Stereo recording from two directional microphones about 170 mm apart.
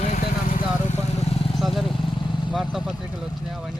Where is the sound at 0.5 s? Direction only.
40° left (ahead or behind).